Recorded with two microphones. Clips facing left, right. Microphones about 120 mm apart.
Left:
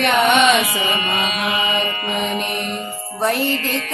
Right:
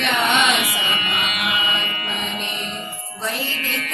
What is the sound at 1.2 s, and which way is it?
Mantra, 35° left (ahead or behind).